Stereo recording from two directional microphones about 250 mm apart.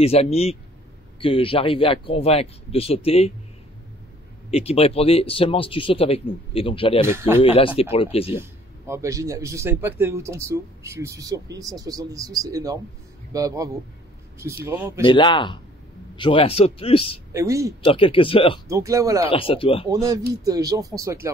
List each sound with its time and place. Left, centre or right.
0.0 s speech: left
4.5 s speech: left
7.1 s a man's voice: centre
7.4 s speech: left
8.4 s a man's voice: centre
15.0 s speech: centre
17.3 s a man's voice: centre
17.8 s speech: left
18.7 s a man's voice: centre
19.2 s speech: left
19.9 s a man's voice: centre